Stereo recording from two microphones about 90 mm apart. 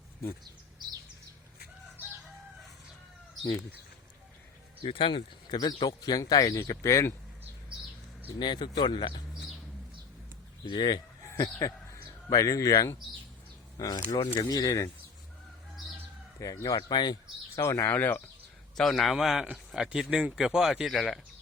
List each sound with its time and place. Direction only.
4.8 s speech: 80° left
5.5 s speech: 50° left (ahead or behind); by 7.5 s 35° left (ahead or behind)
8.4 s speech: 55° left (ahead or behind)
10.7 s a sound: 60° left (ahead or behind)
11.6 s speech: 45° left (ahead or behind)
16.6 s speech: 55° left (ahead or behind)
17.6 s speech: 35° left (ahead or behind)
17.9 s speech: 20° left (ahead or behind)
18.8 s speech: centre (ahead or behind)